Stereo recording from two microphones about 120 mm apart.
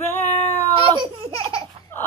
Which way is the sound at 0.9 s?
45° right (ahead or behind).